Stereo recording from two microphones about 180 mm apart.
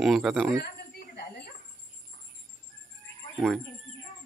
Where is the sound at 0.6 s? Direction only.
60° left (ahead or behind).